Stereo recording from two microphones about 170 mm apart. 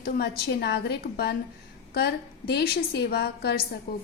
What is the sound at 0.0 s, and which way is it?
A woman's voice, 70° left (ahead or behind).